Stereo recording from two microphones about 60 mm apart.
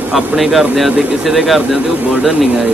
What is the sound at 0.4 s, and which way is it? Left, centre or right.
Speech, centre.